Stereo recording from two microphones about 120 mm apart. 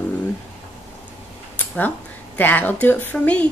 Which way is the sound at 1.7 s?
15° left (ahead or behind).